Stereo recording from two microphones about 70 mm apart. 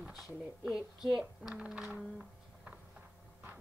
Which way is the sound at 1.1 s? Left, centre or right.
Centre.